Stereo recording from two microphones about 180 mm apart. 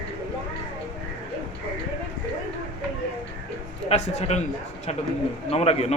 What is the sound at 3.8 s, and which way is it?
Speech, 35° left (ahead or behind).